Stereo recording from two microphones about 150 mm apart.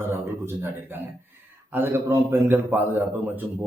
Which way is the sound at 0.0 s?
15° right (ahead or behind).